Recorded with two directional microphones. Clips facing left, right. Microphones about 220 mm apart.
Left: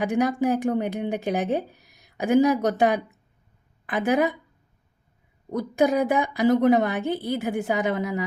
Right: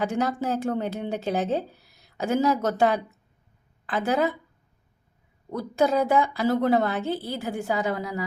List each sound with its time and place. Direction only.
0.0 s a woman's voice: 15° left (ahead or behind)
5.5 s a woman's voice: 15° left (ahead or behind)